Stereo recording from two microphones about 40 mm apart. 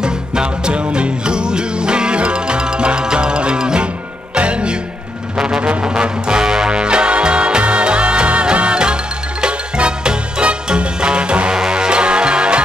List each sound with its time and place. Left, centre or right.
0.0 s music: right